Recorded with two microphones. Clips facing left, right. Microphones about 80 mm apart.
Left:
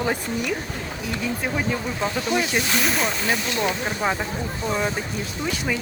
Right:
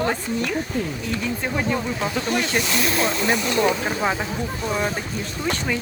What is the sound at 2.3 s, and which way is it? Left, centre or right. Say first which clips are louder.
Speech: left 1 dB; right.